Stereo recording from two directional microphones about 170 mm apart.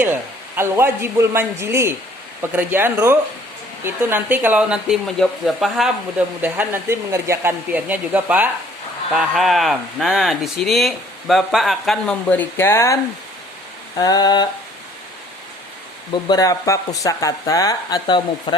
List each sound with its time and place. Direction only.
0.0 s speech: 15° right (ahead or behind); by 14.4 s 25° left (ahead or behind)
16.1 s speech: 20° left (ahead or behind)